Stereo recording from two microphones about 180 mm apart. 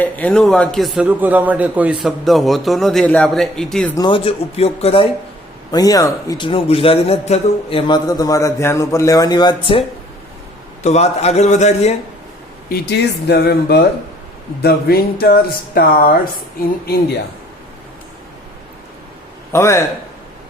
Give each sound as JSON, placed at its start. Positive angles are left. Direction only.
{"t": 0.0, "sound": "a man's voice", "side_deg": 5}
{"t": 3.9, "sound": "speech", "side_deg": 25}
{"t": 5.7, "sound": "a man's voice", "side_deg": 20}
{"t": 10.8, "sound": "speech", "side_deg": 35}
{"t": 12.6, "sound": "speech", "side_deg": 60}
{"t": 19.5, "sound": "a man's voice", "side_deg": 15}